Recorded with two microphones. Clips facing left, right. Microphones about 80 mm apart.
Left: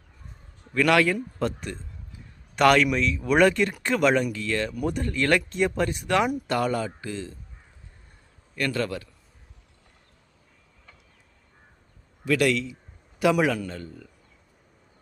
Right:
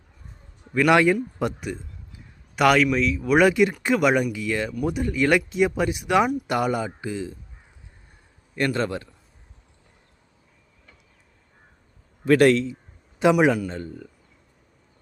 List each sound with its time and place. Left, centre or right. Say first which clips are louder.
0.6 s a sound: right 3 dB; centre
0.9 s speech: right 3 dB; centre
8.5 s a man's voice: right 3 dB; right
12.2 s a man's voice: right 6 dB; right
13.4 s a man's voice: right 5 dB; right